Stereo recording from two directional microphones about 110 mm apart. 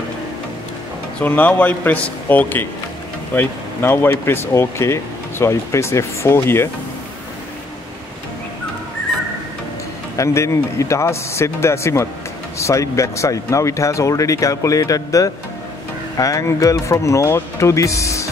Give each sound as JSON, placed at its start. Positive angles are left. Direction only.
{"t": 1.2, "sound": "a man's voice", "side_deg": 15}
{"t": 10.1, "sound": "speech", "side_deg": 25}